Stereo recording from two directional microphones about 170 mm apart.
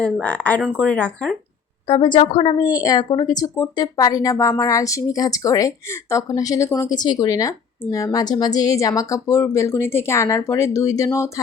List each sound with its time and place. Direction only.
0.0 s speech: 5° left (ahead or behind)
1.9 s a woman's voice: 30° left (ahead or behind)